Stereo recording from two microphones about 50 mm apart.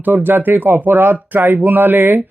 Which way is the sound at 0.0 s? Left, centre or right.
Right.